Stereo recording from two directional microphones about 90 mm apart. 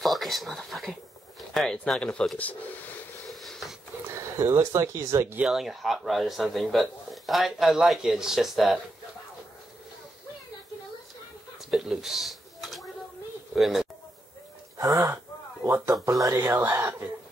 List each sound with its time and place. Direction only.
0.0 s speech: centre (ahead or behind); by 3.0 s 15° left (ahead or behind)
3.3 s a sound: centre (ahead or behind)
4.1 s speech: 35° right (ahead or behind)
5.4 s a man's voice: 5° right (ahead or behind)
11.7 s a sound: 5° right (ahead or behind)
13.6 s speech: centre (ahead or behind)
14.8 s speech: 40° right (ahead or behind)
15.6 s speech: 25° right (ahead or behind)
15.9 s speech: 40° right (ahead or behind)
16.3 s speech: 25° right (ahead or behind)